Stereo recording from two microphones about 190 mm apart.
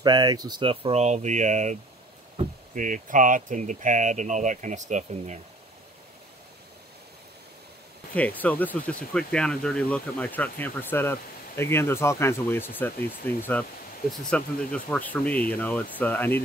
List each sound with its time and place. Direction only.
0.0 s speech: 20° right (ahead or behind); by 5.4 s 40° right (ahead or behind)
8.1 s speech: 10° left (ahead or behind)